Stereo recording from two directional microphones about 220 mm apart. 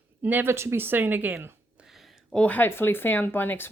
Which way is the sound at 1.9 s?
5° left (ahead or behind).